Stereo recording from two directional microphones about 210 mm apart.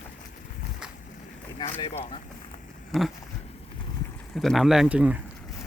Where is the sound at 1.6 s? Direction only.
20° left (ahead or behind).